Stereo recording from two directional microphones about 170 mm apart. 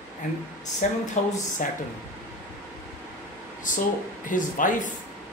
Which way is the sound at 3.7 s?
50° left (ahead or behind).